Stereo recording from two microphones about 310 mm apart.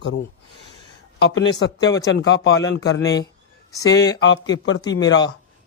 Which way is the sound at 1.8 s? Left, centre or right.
Centre.